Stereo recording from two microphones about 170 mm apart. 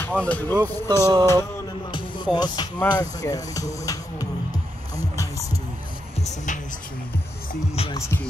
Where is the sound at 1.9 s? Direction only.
25° left (ahead or behind).